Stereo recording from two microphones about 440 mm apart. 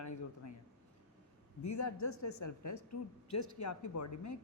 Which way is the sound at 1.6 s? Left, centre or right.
Left.